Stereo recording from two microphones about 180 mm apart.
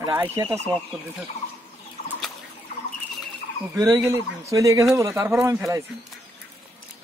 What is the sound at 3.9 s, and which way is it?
Speech, 15° right (ahead or behind).